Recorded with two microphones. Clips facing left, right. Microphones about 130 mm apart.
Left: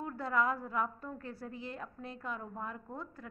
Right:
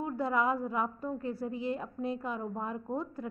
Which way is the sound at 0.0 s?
15° right (ahead or behind).